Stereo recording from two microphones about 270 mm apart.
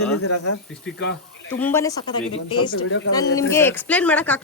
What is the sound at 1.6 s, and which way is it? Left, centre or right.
A woman's voice, centre.